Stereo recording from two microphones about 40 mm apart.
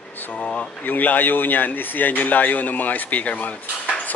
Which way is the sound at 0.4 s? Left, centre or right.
Left.